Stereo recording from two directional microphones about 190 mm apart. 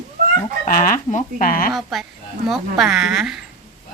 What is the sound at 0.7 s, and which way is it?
Speech, 45° left (ahead or behind).